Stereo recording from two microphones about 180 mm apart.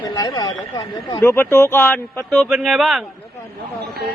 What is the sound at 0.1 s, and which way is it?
Speech, 20° left (ahead or behind).